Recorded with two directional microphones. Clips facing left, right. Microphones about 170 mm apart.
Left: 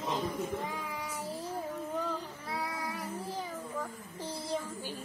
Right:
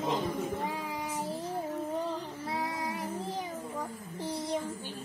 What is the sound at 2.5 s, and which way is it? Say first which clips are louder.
Child singing: right 2 dB; 25° right (ahead or behind).